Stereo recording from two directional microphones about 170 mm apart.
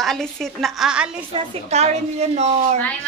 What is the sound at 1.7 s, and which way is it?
Speech, 40° right (ahead or behind).